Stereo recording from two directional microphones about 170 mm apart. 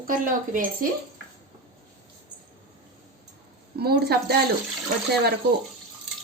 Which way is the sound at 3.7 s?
70° right (ahead or behind).